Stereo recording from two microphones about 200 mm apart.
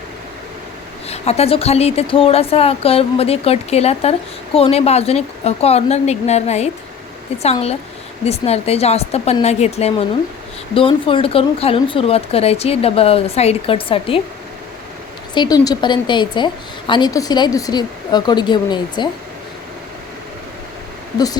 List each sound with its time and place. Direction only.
1.0 s a woman's voice: 30° left (ahead or behind)
15.4 s a woman's voice: 20° left (ahead or behind)